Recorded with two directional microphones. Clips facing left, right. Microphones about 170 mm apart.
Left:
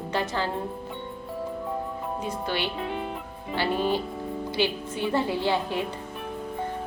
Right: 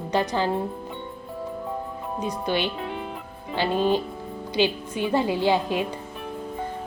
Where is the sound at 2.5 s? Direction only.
20° right (ahead or behind).